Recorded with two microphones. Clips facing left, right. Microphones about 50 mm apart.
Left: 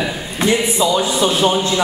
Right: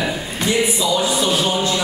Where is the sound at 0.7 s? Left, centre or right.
Left.